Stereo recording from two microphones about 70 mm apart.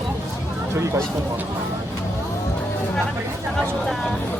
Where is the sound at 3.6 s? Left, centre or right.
Centre.